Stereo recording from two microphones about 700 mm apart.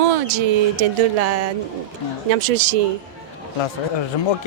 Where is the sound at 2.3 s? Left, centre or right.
Right.